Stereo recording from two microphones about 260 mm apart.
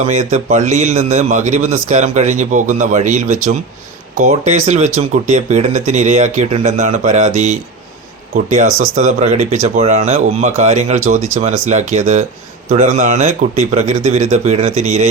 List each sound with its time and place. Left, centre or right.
0.1 s speech: right